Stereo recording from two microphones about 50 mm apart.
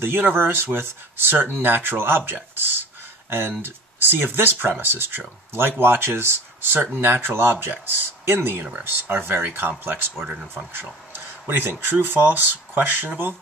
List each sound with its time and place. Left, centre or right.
0.0 s speech: right
7.0 s speech: right
11.1 s a sound: right
11.8 s speech: right